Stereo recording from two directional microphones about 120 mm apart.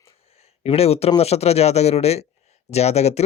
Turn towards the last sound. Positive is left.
turn(degrees=65)  # may be behind; listen again after turning